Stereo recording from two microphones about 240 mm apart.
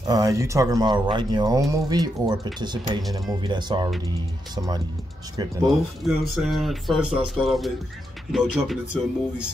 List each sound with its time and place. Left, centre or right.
0.0 s speech: centre
5.7 s speech: centre